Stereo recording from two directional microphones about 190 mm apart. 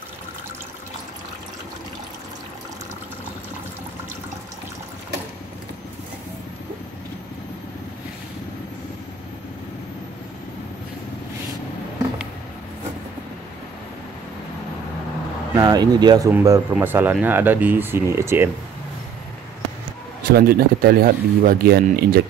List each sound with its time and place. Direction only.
15.5 s speech: 20° right (ahead or behind)
20.2 s speech: 50° right (ahead or behind)